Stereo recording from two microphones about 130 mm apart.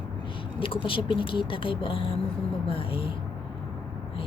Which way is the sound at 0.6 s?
40° left (ahead or behind).